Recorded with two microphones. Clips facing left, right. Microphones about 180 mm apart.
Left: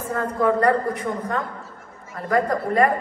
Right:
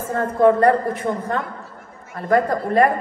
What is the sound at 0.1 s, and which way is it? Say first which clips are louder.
A man's voice: right 5 dB; 30° right (ahead or behind).